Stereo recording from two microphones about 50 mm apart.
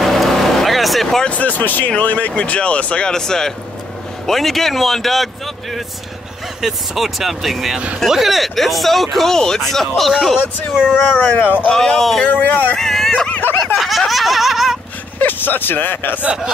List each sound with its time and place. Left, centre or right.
0.0 s vehicle: centre
1.2 s speech: left
3.1 s speech: centre
11.1 s speech: left
11.7 s speech: centre
12.3 s speech: left
12.7 s dog: centre
13.3 s snicker: left
13.7 s laughter: centre
15.1 s speech: left